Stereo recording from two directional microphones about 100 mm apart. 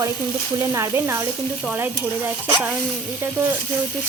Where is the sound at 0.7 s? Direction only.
30° right (ahead or behind).